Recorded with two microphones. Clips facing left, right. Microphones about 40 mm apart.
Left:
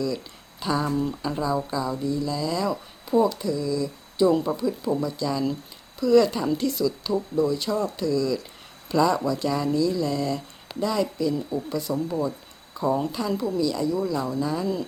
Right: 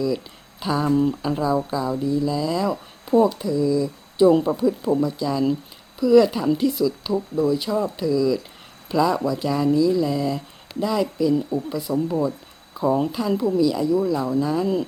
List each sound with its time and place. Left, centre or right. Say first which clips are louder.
0.6 s speech: right 5 dB; centre
12.7 s speech: right 3 dB; centre